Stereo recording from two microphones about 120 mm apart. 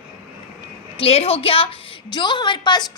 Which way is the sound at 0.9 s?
55° left (ahead or behind).